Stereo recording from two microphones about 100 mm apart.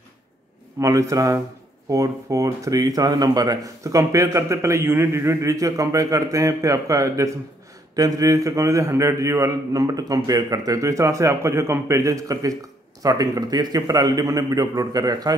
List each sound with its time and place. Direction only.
0.7 s speech: 35° right (ahead or behind)